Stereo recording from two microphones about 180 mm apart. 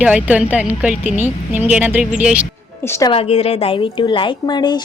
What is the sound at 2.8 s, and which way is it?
Speech, 15° left (ahead or behind).